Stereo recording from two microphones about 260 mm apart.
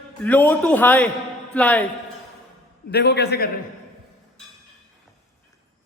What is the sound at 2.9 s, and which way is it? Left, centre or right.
Speech, left.